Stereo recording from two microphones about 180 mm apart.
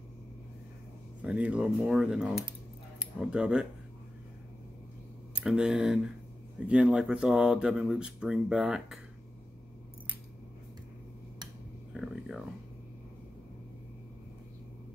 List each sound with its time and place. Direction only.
1.2 s speech: 5° right (ahead or behind)
5.3 s speech: 5° right (ahead or behind)
11.9 s a sound: centre (ahead or behind)